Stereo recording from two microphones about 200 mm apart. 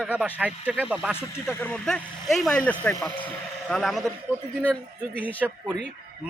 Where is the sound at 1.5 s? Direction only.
10° left (ahead or behind).